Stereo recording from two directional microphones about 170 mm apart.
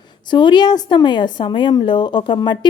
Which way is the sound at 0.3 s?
25° left (ahead or behind).